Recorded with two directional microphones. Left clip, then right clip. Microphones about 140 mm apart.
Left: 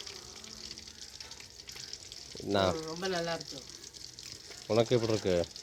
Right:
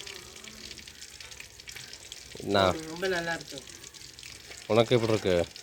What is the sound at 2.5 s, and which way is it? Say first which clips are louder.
Frying: right 5 dB; 5° right (ahead or behind).